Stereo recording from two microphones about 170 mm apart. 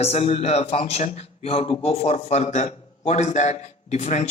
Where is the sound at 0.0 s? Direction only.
35° left (ahead or behind).